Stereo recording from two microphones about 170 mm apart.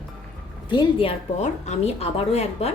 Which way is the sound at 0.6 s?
30° left (ahead or behind).